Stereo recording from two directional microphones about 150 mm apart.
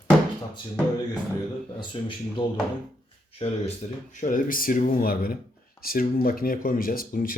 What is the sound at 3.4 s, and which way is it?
Speech, 45° left (ahead or behind).